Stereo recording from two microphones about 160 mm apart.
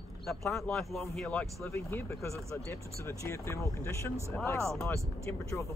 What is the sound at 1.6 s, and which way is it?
Speech, 15° left (ahead or behind).